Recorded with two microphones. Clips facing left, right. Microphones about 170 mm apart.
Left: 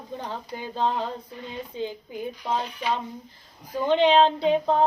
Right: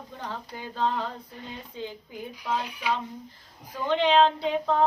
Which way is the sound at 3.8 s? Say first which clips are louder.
Left 3 dB; 20° left (ahead or behind).